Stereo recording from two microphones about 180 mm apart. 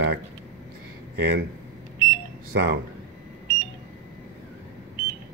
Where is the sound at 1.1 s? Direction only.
70° right (ahead or behind).